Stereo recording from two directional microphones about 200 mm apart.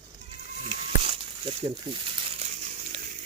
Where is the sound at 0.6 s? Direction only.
25° right (ahead or behind).